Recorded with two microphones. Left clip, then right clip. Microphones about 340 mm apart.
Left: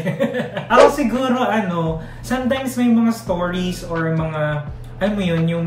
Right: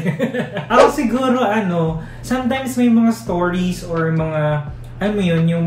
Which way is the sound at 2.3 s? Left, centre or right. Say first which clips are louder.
Right 1 dB; centre.